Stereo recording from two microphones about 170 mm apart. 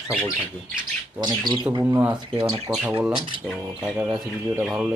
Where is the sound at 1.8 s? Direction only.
15° right (ahead or behind).